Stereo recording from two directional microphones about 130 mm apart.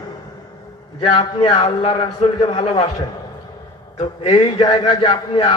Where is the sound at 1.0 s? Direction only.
40° left (ahead or behind).